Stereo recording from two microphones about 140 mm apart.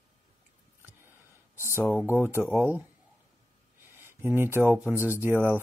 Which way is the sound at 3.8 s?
15° right (ahead or behind).